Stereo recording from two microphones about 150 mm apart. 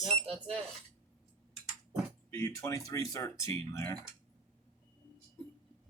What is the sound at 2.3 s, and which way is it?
Speech, 15° left (ahead or behind).